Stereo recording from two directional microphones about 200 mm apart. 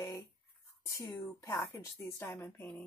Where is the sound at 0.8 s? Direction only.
15° left (ahead or behind).